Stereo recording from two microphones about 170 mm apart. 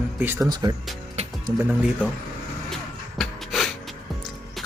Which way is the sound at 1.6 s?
5° right (ahead or behind).